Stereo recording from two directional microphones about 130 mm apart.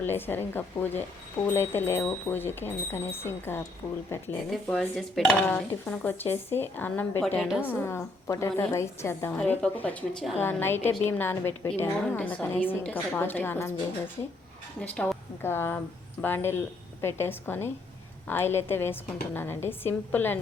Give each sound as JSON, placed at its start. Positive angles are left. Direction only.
{"t": 0.0, "sound": "a woman's voice", "side_deg": 15}
{"t": 4.5, "sound": "dishes", "side_deg": 0}
{"t": 5.5, "sound": "a woman's voice", "side_deg": 10}
{"t": 7.3, "sound": "dishes", "side_deg": -5}
{"t": 7.7, "sound": "a woman's voice", "side_deg": 20}
{"t": 14.8, "sound": "a woman's voice", "side_deg": 5}